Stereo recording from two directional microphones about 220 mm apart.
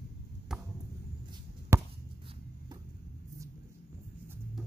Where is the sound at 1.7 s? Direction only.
10° right (ahead or behind).